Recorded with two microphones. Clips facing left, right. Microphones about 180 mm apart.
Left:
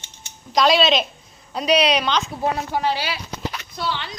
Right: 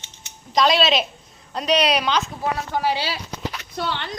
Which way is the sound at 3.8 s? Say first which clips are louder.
Even; 55° right (ahead or behind).